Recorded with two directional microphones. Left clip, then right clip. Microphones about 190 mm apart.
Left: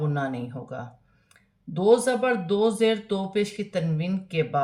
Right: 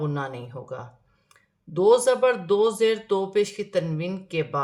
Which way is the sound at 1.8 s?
25° right (ahead or behind).